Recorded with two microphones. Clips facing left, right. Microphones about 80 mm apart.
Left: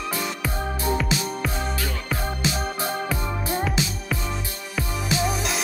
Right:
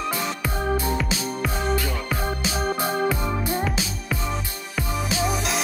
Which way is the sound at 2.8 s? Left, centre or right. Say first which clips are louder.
Right 5 dB; right.